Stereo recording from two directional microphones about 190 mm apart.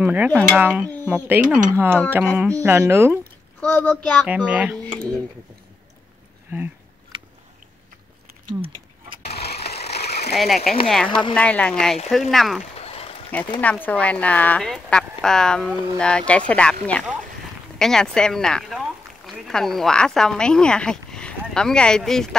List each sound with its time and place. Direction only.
0.0 s speech: 10° right (ahead or behind)
0.3 s speech: 5° left (ahead or behind)
0.6 s speech: 10° right (ahead or behind)
3.6 s speech: 10° left (ahead or behind)
4.5 s speech: 5° right (ahead or behind)
6.5 s speech: 10° right (ahead or behind)
9.4 s mechanisms: 55° left (ahead or behind)
9.9 s a sound: 60° left (ahead or behind)
10.3 s speech: centre (ahead or behind)
11.1 s speech: 25° left (ahead or behind)
11.3 s speech: 5° left (ahead or behind)
12.7 s a sound: 30° left (ahead or behind)
13.6 s speech: 10° left (ahead or behind)
17.7 s speech: 5° left (ahead or behind)